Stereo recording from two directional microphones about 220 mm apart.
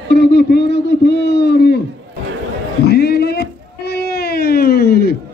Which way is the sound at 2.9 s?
45° left (ahead or behind).